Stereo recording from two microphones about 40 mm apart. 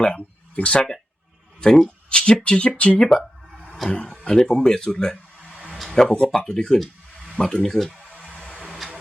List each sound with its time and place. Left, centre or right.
0.0 s speech: left
2.0 s speech: left
3.0 s music: centre
3.8 s speech: left
4.4 s speech: centre
5.7 s a sound: centre
6.1 s speech: centre
8.4 s a sound: right